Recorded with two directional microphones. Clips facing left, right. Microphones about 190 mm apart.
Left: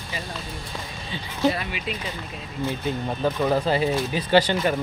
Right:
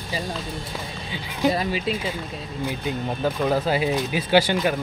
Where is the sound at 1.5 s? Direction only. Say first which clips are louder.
Right 5 dB; 35° right (ahead or behind).